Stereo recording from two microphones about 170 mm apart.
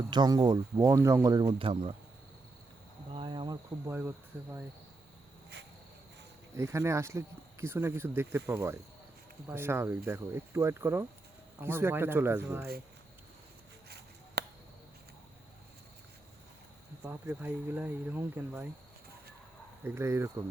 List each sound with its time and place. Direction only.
0.1 s speech: 25° right (ahead or behind)
3.1 s cricket: 30° right (ahead or behind)
3.8 s speech: 15° right (ahead or behind)
6.6 s speech: 15° right (ahead or behind)
14.4 s a sound: 70° right (ahead or behind)
17.0 s speech: 10° right (ahead or behind)
19.8 s speech: 15° right (ahead or behind)